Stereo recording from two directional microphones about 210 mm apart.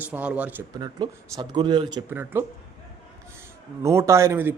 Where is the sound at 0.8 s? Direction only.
20° right (ahead or behind).